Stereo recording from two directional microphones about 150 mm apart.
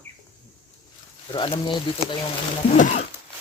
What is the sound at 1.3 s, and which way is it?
Speech, 35° left (ahead or behind).